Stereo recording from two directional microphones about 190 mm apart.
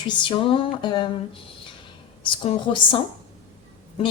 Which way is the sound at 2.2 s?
25° left (ahead or behind).